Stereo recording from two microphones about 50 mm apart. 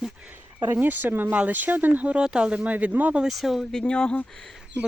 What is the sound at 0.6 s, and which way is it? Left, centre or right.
Speech, right.